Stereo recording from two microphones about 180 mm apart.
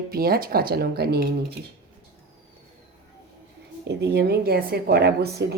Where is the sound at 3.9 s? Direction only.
70° right (ahead or behind).